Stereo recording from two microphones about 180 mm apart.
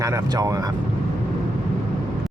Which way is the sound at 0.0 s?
20° right (ahead or behind).